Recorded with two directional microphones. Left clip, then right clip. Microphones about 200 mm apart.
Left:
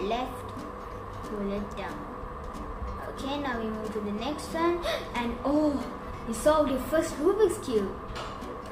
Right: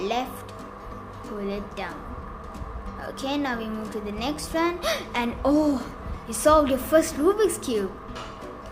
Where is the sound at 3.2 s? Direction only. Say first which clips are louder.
Right 4 dB; 60° right (ahead or behind).